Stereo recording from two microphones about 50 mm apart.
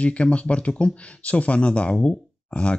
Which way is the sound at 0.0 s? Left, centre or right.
Left.